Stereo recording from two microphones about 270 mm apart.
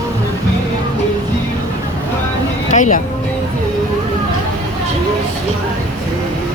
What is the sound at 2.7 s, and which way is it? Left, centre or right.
Music, left.